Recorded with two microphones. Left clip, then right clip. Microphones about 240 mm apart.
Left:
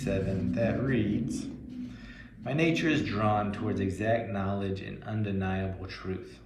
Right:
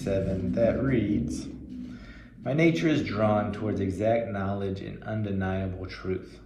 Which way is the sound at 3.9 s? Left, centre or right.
Right.